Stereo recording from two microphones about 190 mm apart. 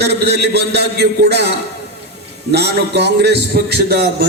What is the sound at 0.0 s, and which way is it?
A man's voice, 60° right (ahead or behind).